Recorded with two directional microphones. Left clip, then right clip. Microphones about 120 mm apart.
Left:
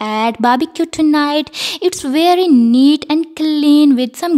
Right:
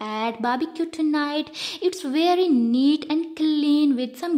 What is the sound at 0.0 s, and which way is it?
Speech, 50° left (ahead or behind).